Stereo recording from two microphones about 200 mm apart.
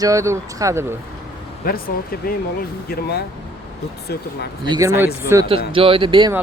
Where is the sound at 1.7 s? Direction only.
50° left (ahead or behind).